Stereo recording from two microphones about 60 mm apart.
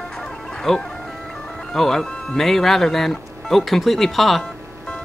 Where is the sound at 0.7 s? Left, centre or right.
Centre.